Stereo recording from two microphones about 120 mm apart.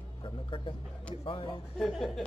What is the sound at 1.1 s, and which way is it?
Speech, 50° left (ahead or behind).